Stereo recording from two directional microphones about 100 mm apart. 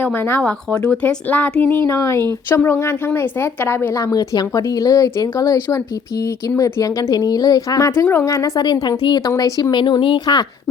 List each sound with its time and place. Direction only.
0.0 s speech: 20° left (ahead or behind)
4.0 s speech: 35° left (ahead or behind)
9.3 s speech: 35° left (ahead or behind); by 10.2 s 55° left (ahead or behind)